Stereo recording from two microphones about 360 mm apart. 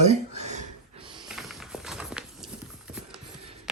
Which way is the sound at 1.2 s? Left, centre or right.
Centre.